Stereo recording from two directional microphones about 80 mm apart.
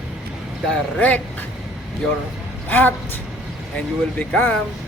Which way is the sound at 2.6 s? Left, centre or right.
Left.